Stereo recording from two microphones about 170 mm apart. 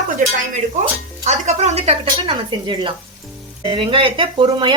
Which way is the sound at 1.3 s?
40° right (ahead or behind).